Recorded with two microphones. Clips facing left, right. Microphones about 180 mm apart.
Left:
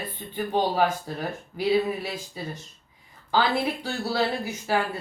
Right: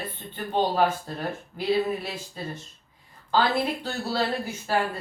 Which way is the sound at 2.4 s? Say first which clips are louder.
Right 1 dB; 10° left (ahead or behind).